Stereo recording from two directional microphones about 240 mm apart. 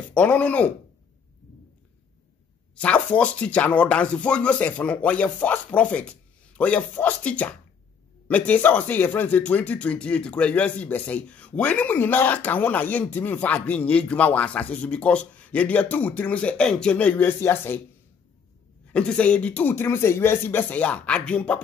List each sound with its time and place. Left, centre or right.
0.1 s speech: centre
2.7 s speech: centre
18.9 s speech: centre